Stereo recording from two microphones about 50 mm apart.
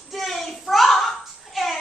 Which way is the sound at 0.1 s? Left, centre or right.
Centre.